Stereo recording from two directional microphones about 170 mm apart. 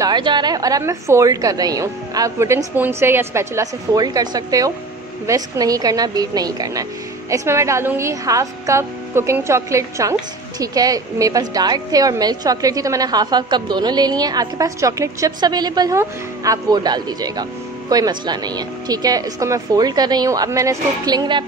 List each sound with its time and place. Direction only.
0.0 s a woman's voice: 25° right (ahead or behind)